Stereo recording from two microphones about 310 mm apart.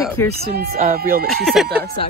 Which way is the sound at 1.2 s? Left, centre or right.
Centre.